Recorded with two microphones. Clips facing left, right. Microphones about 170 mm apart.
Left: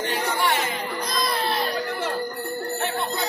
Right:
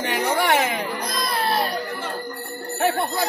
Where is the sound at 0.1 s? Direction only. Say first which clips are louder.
Right 6 dB; 65° right (ahead or behind).